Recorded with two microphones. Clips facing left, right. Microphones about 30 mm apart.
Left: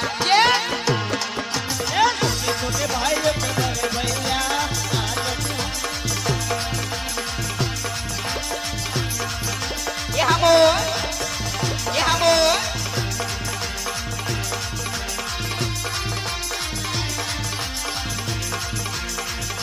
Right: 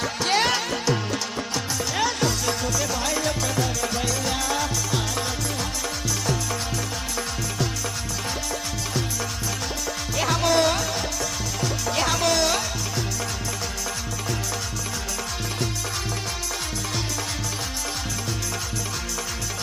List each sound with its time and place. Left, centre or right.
0.0 s music: left
10.2 s music: centre